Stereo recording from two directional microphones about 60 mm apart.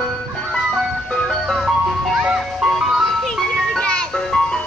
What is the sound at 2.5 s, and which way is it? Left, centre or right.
Music, centre.